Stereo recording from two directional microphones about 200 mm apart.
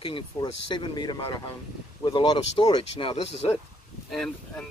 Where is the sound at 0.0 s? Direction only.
25° left (ahead or behind).